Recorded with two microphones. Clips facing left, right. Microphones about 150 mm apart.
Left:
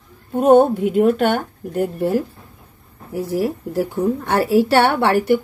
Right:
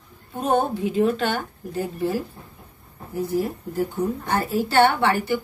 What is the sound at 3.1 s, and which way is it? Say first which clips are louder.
Speech: left 3 dB; 90° left.